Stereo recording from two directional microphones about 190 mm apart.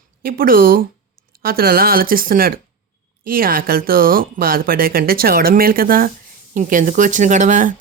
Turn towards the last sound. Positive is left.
turn(degrees=-40)  # may be behind; listen again after turning